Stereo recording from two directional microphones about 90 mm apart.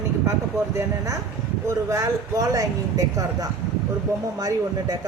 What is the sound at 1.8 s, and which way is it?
Speech, 35° right (ahead or behind).